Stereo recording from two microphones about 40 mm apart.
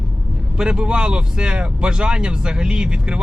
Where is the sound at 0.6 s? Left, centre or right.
Right.